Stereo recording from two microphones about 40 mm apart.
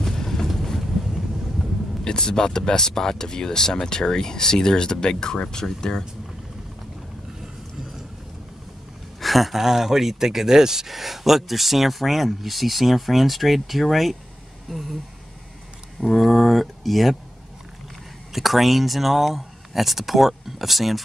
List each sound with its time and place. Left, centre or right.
0.0 s vehicle: centre
2.0 s speech: centre
9.2 s speech: centre
16.0 s speech: centre
18.3 s speech: centre